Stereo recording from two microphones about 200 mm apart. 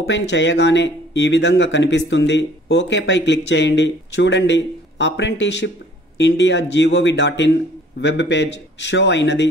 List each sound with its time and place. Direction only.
0.0 s speech: 65° left (ahead or behind)